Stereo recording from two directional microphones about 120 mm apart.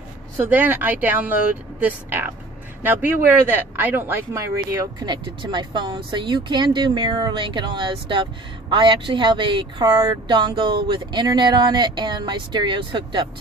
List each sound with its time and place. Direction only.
0.4 s speech: 15° right (ahead or behind)
5.0 s speech: 40° right (ahead or behind)